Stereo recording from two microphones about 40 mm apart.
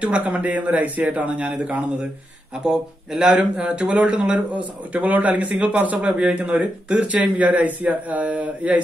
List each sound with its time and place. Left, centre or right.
0.0 s speech: right
2.6 s speech: centre
4.6 s speech: right